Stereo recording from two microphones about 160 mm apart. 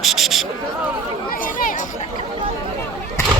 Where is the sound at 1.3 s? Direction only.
60° left (ahead or behind).